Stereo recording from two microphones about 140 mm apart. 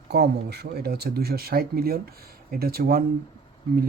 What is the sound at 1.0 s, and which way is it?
Speech, 90° right.